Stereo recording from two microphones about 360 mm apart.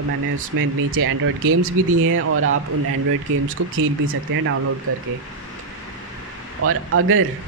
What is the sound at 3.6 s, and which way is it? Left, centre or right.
Speech, right.